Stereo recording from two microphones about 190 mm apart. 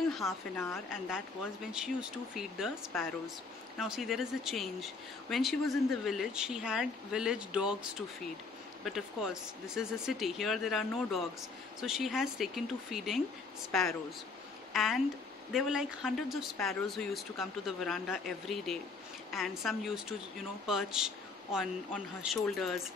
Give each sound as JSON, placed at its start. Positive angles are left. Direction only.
{"t": 0.2, "sound": "a woman's voice", "side_deg": 15}
{"t": 0.9, "sound": "speech", "side_deg": -5}
{"t": 8.8, "sound": "speech", "side_deg": 0}